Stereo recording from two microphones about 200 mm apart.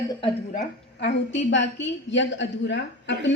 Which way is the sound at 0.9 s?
60° left (ahead or behind).